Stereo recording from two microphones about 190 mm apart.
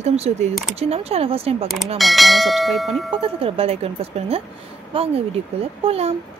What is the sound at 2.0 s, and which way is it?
Bell, centre (ahead or behind).